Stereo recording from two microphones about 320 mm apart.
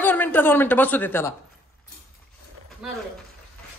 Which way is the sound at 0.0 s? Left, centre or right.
Centre.